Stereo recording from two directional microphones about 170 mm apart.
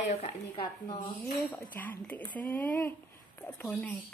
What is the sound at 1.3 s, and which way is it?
Speech, 10° left (ahead or behind).